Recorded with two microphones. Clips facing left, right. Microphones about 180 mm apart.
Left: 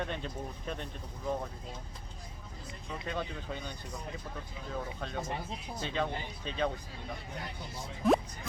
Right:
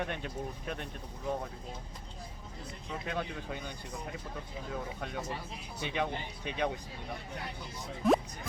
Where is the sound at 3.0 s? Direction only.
10° right (ahead or behind).